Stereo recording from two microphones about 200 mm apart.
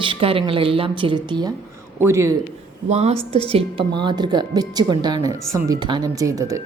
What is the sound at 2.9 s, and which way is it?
Speech, 35° right (ahead or behind).